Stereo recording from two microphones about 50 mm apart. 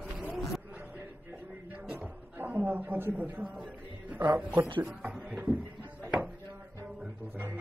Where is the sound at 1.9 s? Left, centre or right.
Right.